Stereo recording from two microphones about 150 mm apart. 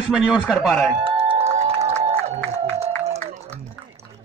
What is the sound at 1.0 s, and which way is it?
Music, 40° right (ahead or behind).